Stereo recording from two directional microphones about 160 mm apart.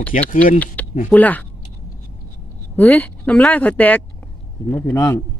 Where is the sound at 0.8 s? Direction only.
10° left (ahead or behind).